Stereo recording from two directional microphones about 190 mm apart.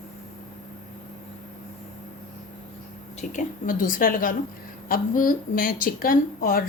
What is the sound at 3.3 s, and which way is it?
A woman's voice, 45° left (ahead or behind).